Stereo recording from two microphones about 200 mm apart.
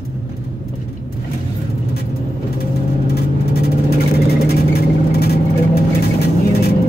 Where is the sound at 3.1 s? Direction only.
50° left (ahead or behind).